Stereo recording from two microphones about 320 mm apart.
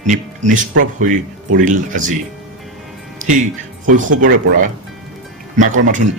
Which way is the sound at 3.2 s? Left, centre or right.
Right.